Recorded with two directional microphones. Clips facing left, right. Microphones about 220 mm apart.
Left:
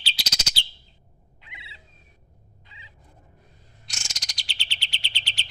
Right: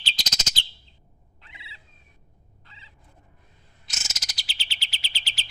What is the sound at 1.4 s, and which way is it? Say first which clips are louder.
Fowl: left 1 dB; 15° left (ahead or behind).